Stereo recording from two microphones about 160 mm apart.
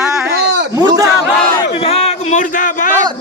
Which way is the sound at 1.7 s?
40° left (ahead or behind).